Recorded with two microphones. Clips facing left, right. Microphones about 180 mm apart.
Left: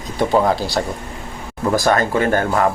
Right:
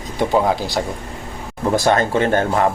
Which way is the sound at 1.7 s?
25° right (ahead or behind).